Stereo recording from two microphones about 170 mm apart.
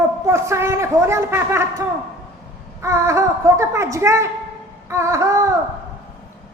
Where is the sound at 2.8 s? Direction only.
15° right (ahead or behind).